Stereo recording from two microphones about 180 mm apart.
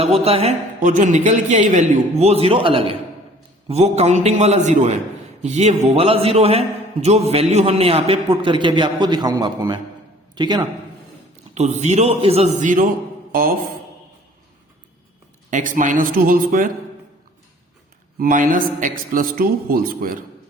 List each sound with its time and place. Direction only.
0.0 s a man's voice: 35° right (ahead or behind)
0.8 s a man's voice: 45° right (ahead or behind); by 10.7 s 25° right (ahead or behind)
11.5 s a man's voice: 40° right (ahead or behind)
15.4 s a man's voice: 45° right (ahead or behind)
18.2 s a man's voice: 50° right (ahead or behind)